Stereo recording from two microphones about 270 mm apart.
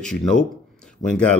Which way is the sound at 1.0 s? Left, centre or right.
Left.